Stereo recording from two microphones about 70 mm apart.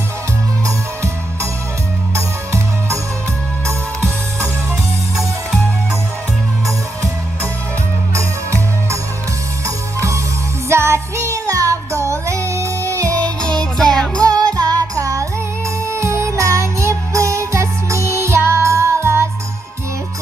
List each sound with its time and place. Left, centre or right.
2.1 s music: right
5.1 s music: centre
8.1 s music: right
13.9 s music: centre
14.4 s music: right